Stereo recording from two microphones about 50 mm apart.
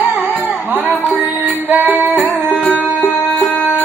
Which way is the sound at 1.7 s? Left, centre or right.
Right.